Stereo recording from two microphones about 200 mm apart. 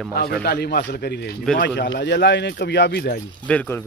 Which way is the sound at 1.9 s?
60° left (ahead or behind).